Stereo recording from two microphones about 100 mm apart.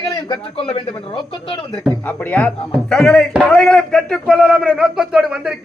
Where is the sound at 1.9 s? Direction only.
15° left (ahead or behind).